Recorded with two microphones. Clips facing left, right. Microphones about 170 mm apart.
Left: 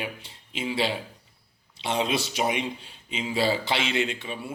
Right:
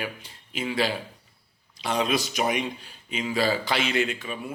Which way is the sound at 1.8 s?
25° left (ahead or behind).